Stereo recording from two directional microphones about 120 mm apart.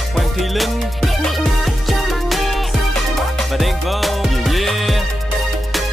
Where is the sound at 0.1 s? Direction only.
Centre (ahead or behind).